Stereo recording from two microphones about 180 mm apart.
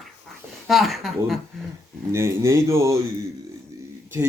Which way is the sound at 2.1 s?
15° right (ahead or behind).